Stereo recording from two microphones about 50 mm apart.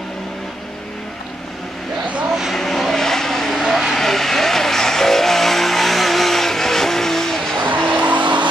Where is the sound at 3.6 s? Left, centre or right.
Centre.